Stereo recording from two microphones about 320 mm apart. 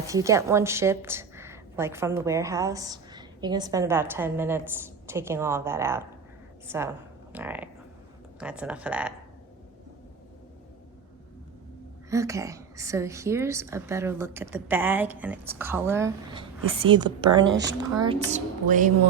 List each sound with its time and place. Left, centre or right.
0.1 s a woman's voice: centre
12.1 s a woman's voice: centre
17.5 s speech: right
17.9 s a woman's voice: centre